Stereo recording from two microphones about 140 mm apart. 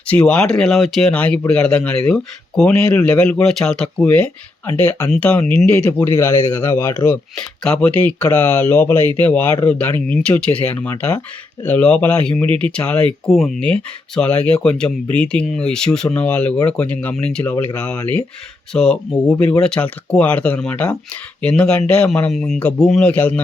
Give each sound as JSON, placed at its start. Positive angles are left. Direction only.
{"t": 0.1, "sound": "speech", "side_deg": 10}
{"t": 7.3, "sound": "speech", "side_deg": 5}
{"t": 18.7, "sound": "speech", "side_deg": 5}